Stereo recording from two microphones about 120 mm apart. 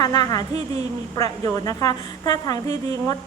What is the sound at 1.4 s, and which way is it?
A woman's voice, 30° left (ahead or behind).